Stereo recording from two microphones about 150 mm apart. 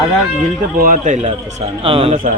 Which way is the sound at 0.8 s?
60° right (ahead or behind).